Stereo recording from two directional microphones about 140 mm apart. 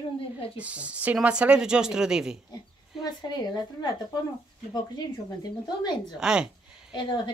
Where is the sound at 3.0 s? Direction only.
30° left (ahead or behind).